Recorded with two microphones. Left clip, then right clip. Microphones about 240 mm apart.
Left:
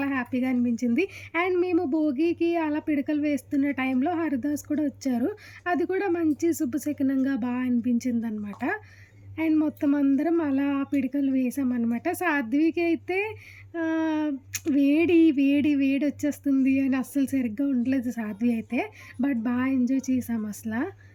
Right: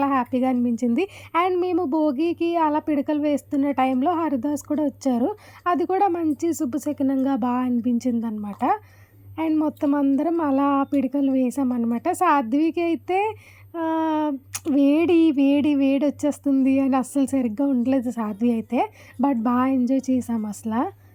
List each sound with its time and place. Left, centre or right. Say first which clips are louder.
0.0 s speech: right 7 dB; centre